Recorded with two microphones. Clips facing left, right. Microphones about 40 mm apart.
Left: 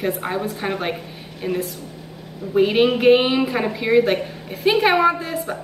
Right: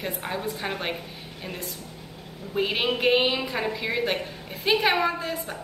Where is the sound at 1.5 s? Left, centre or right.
Left.